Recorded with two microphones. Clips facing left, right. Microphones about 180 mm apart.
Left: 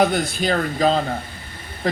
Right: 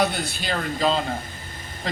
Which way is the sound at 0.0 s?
50° left (ahead or behind).